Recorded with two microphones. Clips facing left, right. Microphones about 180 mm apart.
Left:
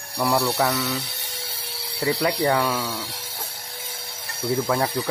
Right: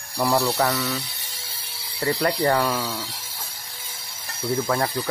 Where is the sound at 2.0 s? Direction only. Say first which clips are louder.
Even; 15° left (ahead or behind).